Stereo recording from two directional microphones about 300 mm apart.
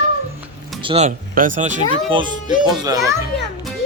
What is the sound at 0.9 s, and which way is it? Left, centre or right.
Speech, right.